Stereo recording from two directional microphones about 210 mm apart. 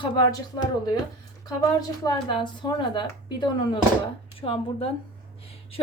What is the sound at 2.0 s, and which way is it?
A woman's voice, 20° left (ahead or behind).